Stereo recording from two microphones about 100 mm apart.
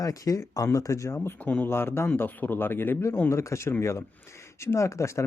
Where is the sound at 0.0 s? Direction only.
35° left (ahead or behind).